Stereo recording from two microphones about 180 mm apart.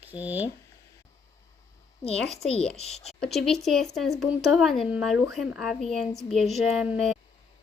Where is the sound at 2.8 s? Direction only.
35° left (ahead or behind).